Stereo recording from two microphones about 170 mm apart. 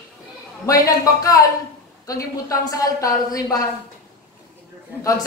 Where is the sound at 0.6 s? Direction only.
20° left (ahead or behind).